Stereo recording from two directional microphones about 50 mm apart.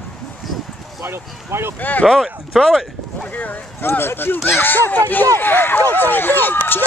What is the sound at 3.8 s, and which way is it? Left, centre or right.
Speech, left.